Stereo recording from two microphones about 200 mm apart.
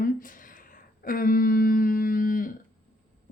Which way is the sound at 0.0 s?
45° left (ahead or behind).